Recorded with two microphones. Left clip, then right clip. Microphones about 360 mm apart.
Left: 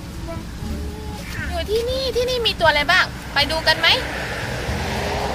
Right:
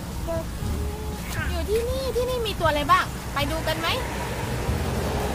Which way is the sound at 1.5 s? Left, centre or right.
Left.